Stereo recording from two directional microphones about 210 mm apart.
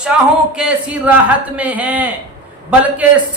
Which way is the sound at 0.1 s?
5° right (ahead or behind).